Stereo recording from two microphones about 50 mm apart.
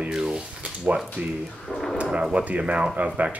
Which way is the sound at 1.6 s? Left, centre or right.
Centre.